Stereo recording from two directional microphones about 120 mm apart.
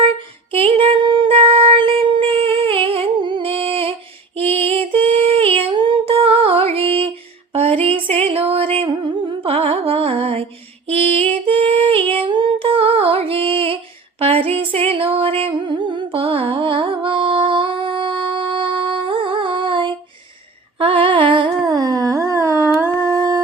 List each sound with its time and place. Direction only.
0.5 s music: 50° right (ahead or behind)
4.4 s female singing: 55° right (ahead or behind)
7.5 s music: 55° right (ahead or behind)
10.8 s female singing: 55° right (ahead or behind)
12.1 s music: 45° right (ahead or behind)
14.2 s a sound: 55° right (ahead or behind)
14.6 s music: 50° right (ahead or behind)
20.7 s humming: 50° right (ahead or behind)
21.7 s a sound: 35° right (ahead or behind)
23.0 s humming: 30° left (ahead or behind)